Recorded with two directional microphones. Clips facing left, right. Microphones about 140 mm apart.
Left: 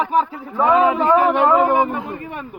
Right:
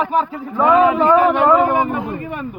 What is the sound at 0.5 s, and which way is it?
Speech, 25° left (ahead or behind).